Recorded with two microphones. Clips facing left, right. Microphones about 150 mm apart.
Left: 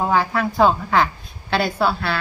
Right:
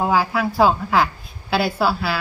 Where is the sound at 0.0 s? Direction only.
5° right (ahead or behind).